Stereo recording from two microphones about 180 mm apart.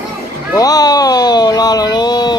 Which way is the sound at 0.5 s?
20° left (ahead or behind).